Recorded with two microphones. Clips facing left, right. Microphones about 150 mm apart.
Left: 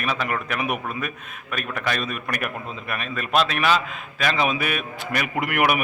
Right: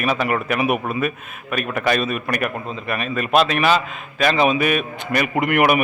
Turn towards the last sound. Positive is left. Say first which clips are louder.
# right 5 dB
turn(degrees=0)  # may be behind; listen again after turning